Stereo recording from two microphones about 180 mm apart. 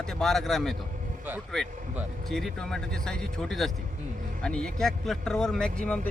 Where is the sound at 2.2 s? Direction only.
Centre (ahead or behind).